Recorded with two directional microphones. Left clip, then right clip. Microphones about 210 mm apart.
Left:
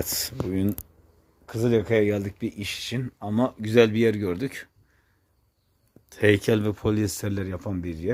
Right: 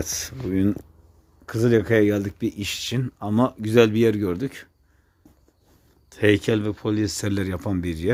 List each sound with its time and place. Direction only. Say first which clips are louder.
0.0 s speech: even; 5° left (ahead or behind)
0.5 s speech: right 6 dB; 10° right (ahead or behind)
1.5 s speech: right 3 dB; 25° right (ahead or behind); by 4.7 s centre (ahead or behind)
6.1 s speech: right 1 dB; centre (ahead or behind)
7.2 s speech: right 5 dB; 10° right (ahead or behind)